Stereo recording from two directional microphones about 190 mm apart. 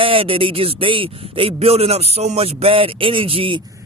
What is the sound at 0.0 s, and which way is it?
A man's voice, 30° right (ahead or behind).